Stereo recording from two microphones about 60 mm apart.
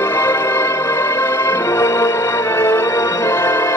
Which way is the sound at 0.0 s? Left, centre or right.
Left.